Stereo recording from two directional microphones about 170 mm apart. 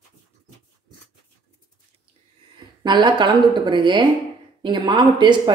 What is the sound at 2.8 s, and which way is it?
Speech, 25° right (ahead or behind).